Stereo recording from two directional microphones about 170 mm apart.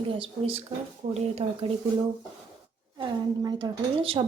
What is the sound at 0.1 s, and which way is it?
Speech, 35° right (ahead or behind).